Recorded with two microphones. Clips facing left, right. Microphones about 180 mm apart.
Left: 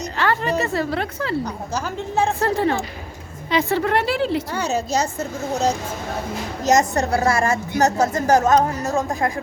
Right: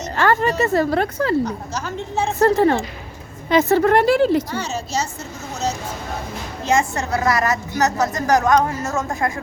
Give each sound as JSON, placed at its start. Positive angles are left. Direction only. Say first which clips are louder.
{"t": 0.2, "sound": "a woman's voice", "louder": "right 4 dB", "side_deg": -45}
{"t": 2.4, "sound": "a woman's voice", "louder": "right 5 dB", "side_deg": -45}
{"t": 6.7, "sound": "a woman's voice", "louder": "left 2 dB", "side_deg": 40}